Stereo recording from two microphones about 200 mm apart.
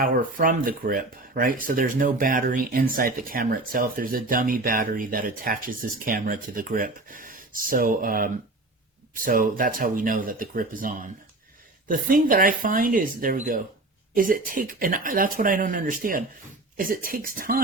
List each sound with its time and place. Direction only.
0.0 s speech: 45° right (ahead or behind)